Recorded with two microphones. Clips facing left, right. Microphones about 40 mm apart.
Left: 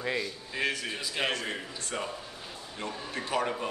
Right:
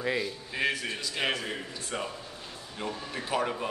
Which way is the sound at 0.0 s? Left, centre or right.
Centre.